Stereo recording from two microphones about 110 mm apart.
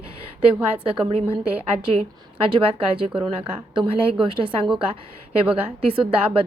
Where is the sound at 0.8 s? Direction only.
55° right (ahead or behind).